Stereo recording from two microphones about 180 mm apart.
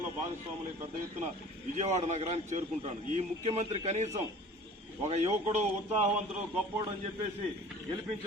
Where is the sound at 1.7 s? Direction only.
40° right (ahead or behind).